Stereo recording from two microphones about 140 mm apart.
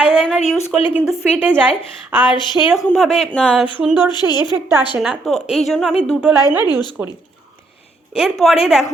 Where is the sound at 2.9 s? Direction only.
Centre (ahead or behind).